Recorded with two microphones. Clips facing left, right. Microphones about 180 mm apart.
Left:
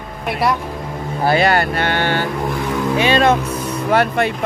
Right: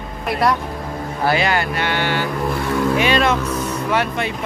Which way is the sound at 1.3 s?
45° left (ahead or behind).